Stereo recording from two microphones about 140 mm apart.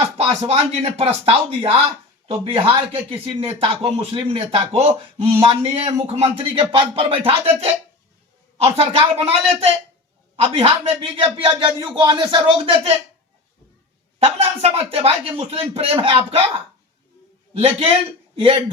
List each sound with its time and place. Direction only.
0.2 s speech: 45° right (ahead or behind)
10.3 s speech: 45° right (ahead or behind)
14.2 s speech: 45° right (ahead or behind)
17.6 s speech: 40° right (ahead or behind)